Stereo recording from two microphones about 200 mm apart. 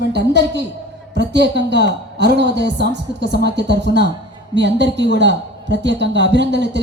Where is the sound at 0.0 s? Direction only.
60° right (ahead or behind).